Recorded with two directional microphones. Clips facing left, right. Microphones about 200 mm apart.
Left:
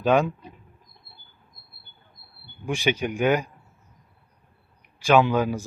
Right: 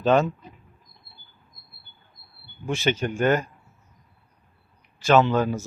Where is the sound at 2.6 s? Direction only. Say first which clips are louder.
Even; 15° left (ahead or behind).